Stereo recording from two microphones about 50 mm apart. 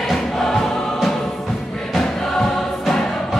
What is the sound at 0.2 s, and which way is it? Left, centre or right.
Choir, centre.